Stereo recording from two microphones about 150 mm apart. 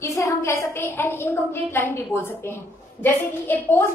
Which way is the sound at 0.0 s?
20° left (ahead or behind).